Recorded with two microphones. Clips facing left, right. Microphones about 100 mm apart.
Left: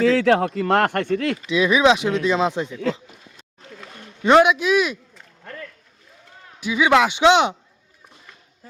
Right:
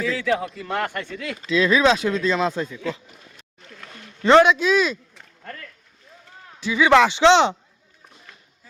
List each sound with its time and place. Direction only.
0.0 s a man's voice: 80° left; by 1.4 s 60° left (ahead or behind)
1.5 s speech: 15° left (ahead or behind)
3.8 s speech: 10° left (ahead or behind)
6.6 s speech: 15° left (ahead or behind)